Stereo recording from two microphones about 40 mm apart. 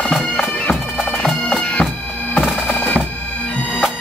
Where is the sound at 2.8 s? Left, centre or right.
Left.